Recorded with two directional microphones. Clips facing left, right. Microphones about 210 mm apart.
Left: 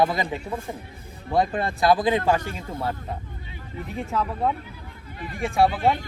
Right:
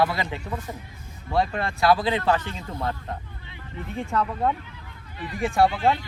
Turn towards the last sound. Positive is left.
turn(degrees=0)  # may be behind; listen again after turning